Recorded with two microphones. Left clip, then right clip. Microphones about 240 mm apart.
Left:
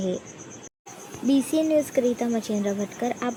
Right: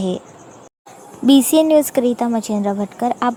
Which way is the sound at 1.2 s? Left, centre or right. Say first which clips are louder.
Right 10 dB; right.